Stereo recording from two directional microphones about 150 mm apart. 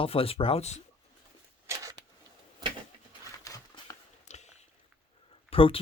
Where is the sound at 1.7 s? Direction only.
20° right (ahead or behind).